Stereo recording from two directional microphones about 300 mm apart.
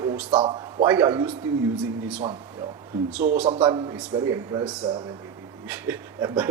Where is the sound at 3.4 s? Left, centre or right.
Centre.